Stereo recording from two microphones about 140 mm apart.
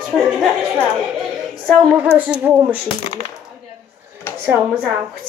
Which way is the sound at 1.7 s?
5° right (ahead or behind).